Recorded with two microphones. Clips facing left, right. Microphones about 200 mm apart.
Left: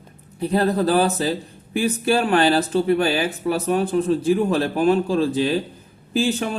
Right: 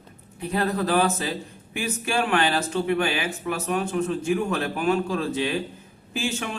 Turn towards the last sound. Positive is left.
turn(degrees=35)  # may be behind; listen again after turning